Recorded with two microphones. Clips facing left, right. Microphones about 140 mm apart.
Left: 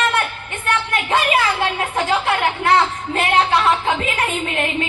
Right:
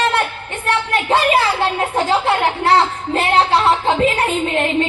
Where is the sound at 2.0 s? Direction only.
30° right (ahead or behind).